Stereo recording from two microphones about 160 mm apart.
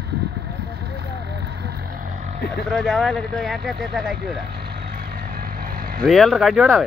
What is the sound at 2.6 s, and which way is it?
Speech, 5° left (ahead or behind).